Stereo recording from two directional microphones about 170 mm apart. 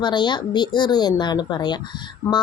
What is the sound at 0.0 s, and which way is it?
Speech, 25° left (ahead or behind).